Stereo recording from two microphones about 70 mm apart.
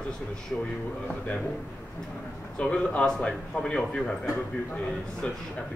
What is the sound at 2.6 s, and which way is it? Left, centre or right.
A man's voice, centre.